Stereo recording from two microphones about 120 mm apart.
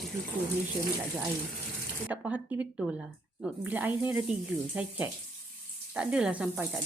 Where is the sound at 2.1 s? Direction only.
15° right (ahead or behind).